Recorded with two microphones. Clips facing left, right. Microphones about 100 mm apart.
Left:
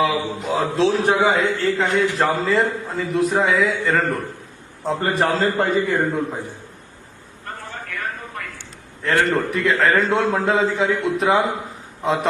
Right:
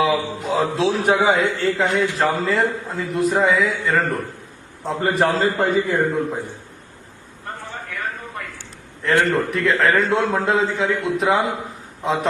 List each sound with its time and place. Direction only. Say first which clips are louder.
0.0 s a man's voice: right 1 dB; centre (ahead or behind)
9.3 s a man's voice: even; centre (ahead or behind)